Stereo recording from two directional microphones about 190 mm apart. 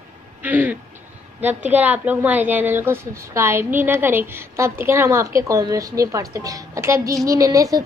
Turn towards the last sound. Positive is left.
turn(degrees=-20)  # may be behind; listen again after turning